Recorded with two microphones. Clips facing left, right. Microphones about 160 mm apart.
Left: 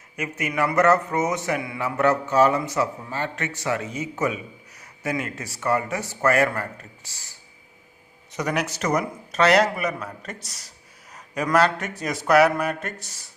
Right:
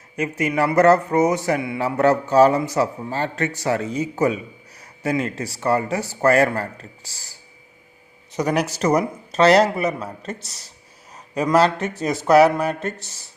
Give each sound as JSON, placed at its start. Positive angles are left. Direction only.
{"t": 0.2, "sound": "speech", "side_deg": -30}
{"t": 8.3, "sound": "a man's voice", "side_deg": -30}